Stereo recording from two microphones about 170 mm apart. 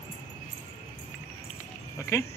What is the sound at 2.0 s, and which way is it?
Speech, 15° left (ahead or behind).